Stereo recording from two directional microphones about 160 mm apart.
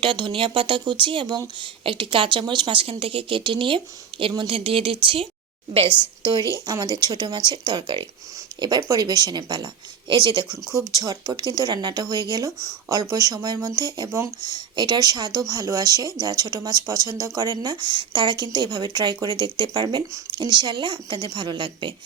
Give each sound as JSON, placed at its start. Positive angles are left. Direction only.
{"t": 0.0, "sound": "a woman's voice", "side_deg": -30}
{"t": 6.7, "sound": "speech", "side_deg": -25}